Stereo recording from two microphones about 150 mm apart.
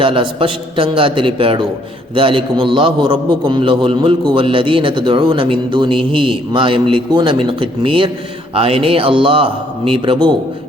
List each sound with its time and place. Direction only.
0.0 s a man's voice: 35° right (ahead or behind)